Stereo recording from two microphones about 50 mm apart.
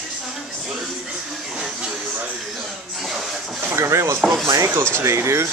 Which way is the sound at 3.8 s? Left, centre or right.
Right.